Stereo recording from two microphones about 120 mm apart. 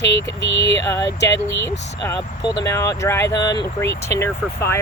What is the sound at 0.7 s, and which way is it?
Speech, 25° left (ahead or behind).